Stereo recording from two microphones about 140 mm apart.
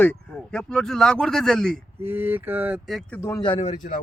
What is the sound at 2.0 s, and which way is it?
Speech, 15° right (ahead or behind).